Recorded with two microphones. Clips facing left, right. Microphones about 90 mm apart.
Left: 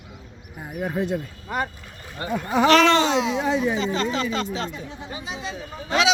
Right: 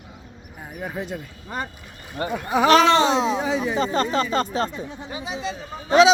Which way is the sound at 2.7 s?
40° right (ahead or behind).